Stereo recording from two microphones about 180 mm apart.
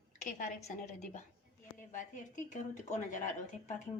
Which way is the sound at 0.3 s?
45° left (ahead or behind).